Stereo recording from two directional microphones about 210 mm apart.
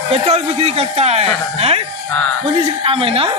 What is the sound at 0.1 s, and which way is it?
Speech, 30° right (ahead or behind).